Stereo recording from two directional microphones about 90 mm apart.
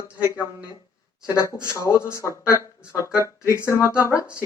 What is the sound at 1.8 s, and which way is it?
Speech, 30° left (ahead or behind).